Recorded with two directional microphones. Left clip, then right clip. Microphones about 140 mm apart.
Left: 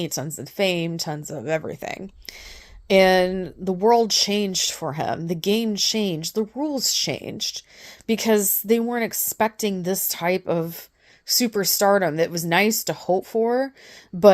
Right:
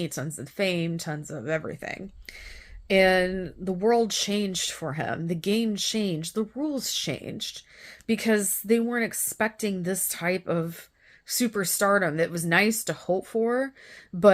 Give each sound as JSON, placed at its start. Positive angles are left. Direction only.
{"t": 0.0, "sound": "a woman's voice", "side_deg": 30}
{"t": 14.1, "sound": "a woman's voice", "side_deg": 40}